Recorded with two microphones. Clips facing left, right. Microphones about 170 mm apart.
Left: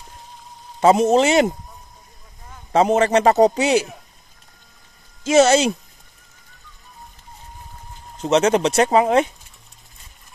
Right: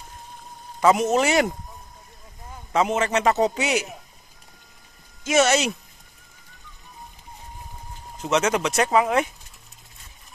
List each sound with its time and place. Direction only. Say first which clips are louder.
0.7 s a man's voice: left 5 dB; 30° left (ahead or behind)
2.7 s a man's voice: left 6 dB; 35° left (ahead or behind)
5.2 s a man's voice: left 6 dB; 30° left (ahead or behind)
8.2 s a man's voice: left 6 dB; 30° left (ahead or behind)